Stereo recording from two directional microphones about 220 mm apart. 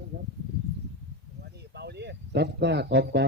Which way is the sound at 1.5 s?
50° right (ahead or behind).